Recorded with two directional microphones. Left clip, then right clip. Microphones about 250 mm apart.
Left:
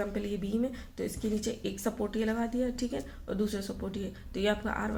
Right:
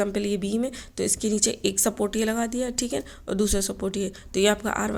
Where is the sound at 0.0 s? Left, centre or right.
Right.